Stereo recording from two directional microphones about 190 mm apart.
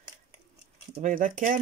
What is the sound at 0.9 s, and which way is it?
Speech, 45° right (ahead or behind).